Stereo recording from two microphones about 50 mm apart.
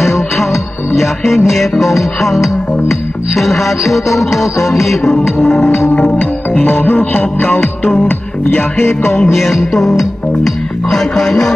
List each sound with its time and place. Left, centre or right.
0.4 s music: centre
1.5 s speech: centre
5.6 s music: left
6.5 s music: left
9.3 s speech: centre